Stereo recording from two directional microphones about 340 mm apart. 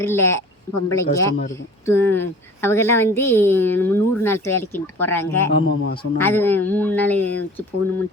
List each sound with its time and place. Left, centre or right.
0.0 s a woman's voice: centre
5.5 s a man's voice: left
6.1 s a man's voice: centre